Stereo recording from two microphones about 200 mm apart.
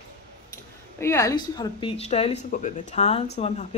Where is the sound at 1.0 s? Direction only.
15° left (ahead or behind); by 3.8 s 30° left (ahead or behind).